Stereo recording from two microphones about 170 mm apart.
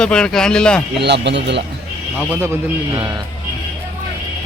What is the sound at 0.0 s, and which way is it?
Speech, 5° left (ahead or behind).